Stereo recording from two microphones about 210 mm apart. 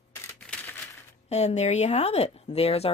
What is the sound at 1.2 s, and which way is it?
Speech, 30° left (ahead or behind).